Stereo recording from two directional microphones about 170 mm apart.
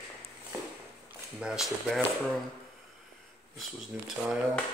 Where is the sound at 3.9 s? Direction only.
5° right (ahead or behind).